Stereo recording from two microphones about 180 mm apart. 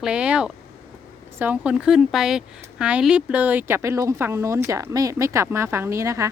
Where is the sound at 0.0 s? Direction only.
5° right (ahead or behind).